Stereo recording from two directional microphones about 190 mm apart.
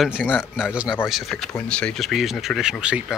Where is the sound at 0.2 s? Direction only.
10° left (ahead or behind).